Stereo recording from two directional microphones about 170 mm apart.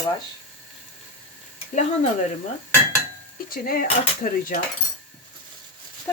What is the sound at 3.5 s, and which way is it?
Speech, 60° left (ahead or behind).